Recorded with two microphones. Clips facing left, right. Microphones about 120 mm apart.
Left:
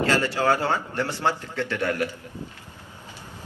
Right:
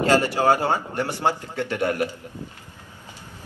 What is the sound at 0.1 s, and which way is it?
A man's voice, 15° right (ahead or behind).